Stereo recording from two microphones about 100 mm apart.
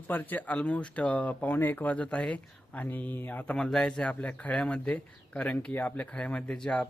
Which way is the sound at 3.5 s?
5° left (ahead or behind).